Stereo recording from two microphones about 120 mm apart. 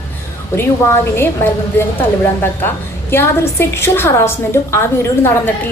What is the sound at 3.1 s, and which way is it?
A woman's voice, 20° left (ahead or behind).